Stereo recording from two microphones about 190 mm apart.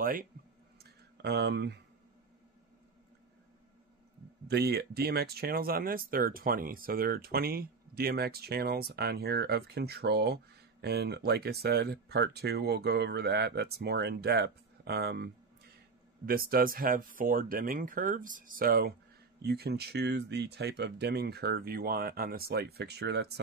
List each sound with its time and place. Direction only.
0.0 s speech: 45° right (ahead or behind)
1.2 s speech: 65° right (ahead or behind)
4.5 s speech: 60° right (ahead or behind)